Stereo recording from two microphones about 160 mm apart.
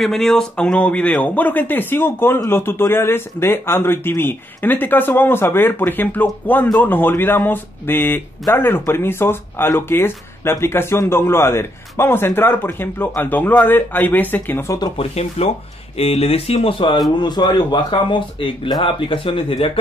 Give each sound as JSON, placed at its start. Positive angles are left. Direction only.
{"t": 0.0, "sound": "speech", "side_deg": 0}
{"t": 14.8, "sound": "speech", "side_deg": 40}